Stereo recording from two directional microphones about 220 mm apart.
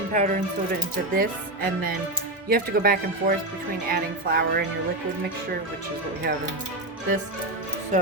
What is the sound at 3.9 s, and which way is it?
Music, 45° right (ahead or behind).